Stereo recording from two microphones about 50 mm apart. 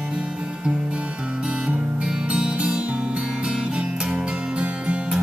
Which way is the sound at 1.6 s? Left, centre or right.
Centre.